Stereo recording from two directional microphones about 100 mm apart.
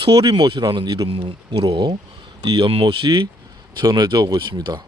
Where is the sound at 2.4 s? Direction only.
50° right (ahead or behind).